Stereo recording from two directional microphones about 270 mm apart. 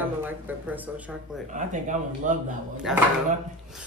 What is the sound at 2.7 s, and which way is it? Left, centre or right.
Speech, centre.